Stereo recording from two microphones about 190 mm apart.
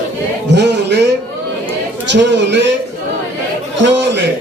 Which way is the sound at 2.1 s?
65° right (ahead or behind).